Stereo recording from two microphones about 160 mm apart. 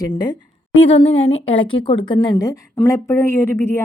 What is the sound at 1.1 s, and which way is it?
A woman's voice, 40° left (ahead or behind).